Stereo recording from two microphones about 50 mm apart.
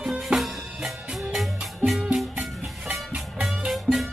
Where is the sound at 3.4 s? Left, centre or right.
Centre.